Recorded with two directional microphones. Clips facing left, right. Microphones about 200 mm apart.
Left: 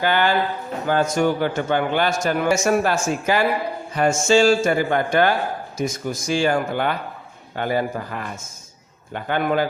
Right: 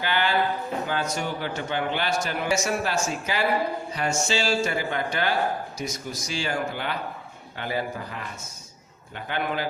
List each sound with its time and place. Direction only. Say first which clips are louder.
0.0 s a man's voice: left 5 dB; 45° left (ahead or behind)